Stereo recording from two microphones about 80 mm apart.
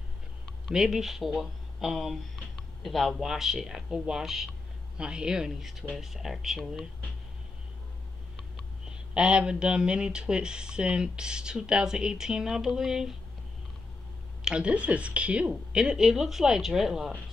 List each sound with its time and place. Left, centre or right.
0.7 s speech: centre
8.9 s speech: centre
14.4 s speech: centre